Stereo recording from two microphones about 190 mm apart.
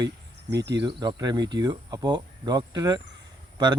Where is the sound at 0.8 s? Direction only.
25° right (ahead or behind).